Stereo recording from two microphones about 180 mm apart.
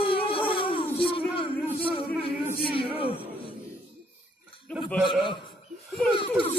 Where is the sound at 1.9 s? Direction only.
30° left (ahead or behind).